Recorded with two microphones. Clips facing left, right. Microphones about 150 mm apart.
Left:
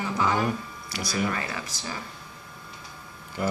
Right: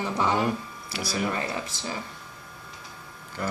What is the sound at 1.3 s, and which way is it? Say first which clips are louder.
Speech: right 2 dB; 25° right (ahead or behind).